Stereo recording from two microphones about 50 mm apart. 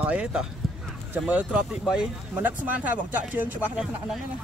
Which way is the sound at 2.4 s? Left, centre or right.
Right.